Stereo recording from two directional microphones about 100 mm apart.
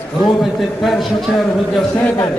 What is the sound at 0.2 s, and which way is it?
A man's voice, centre (ahead or behind).